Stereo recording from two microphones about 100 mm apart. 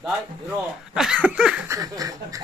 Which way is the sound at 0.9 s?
10° right (ahead or behind).